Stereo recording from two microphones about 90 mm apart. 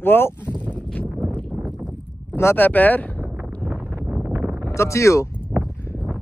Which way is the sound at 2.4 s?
25° left (ahead or behind).